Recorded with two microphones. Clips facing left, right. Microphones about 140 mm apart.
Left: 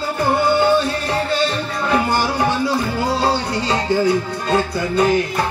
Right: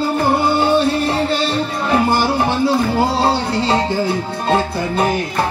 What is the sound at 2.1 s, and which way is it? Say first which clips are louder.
Music: right 2 dB; 25° right (ahead or behind).